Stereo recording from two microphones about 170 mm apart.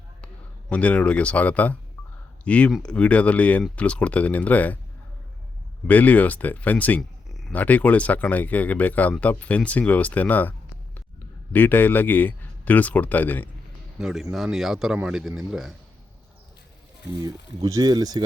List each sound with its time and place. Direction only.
0.7 s speech: 5° left (ahead or behind)
5.9 s speech: 10° left (ahead or behind)
11.5 s speech: 10° left (ahead or behind)
14.0 s speech: centre (ahead or behind)
17.1 s speech: 20° right (ahead or behind)